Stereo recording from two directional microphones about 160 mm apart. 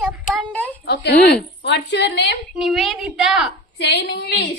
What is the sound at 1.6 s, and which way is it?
Speech, 90° left.